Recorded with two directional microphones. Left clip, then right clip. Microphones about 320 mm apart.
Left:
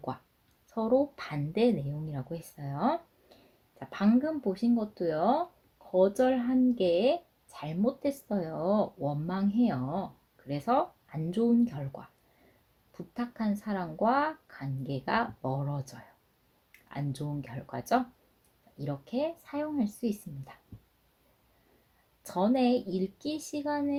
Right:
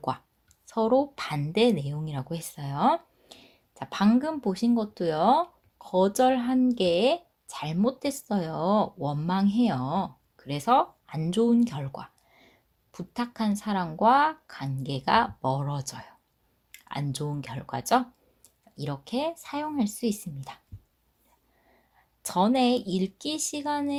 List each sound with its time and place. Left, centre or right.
0.7 s speech: right
22.2 s speech: right